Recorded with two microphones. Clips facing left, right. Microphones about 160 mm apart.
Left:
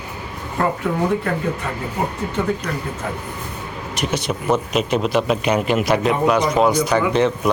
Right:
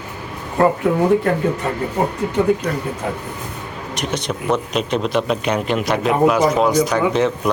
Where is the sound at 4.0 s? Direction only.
5° left (ahead or behind).